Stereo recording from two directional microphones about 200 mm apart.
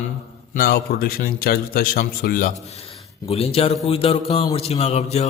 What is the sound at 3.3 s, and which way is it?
A man's voice, 30° left (ahead or behind).